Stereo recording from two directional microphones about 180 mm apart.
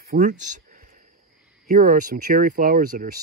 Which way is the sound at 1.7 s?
50° right (ahead or behind).